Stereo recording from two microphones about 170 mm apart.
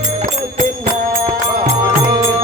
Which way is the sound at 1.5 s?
25° right (ahead or behind).